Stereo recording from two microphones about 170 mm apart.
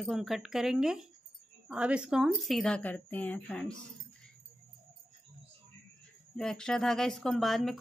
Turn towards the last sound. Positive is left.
turn(degrees=0)  # may be behind; listen again after turning